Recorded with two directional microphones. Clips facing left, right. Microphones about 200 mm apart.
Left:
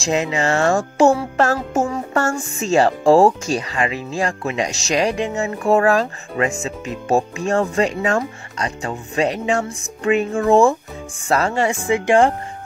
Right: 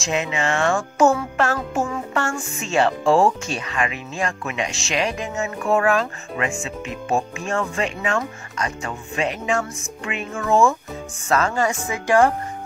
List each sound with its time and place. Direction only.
0.0 s music: 35° left (ahead or behind)
11.9 s speech: 25° left (ahead or behind)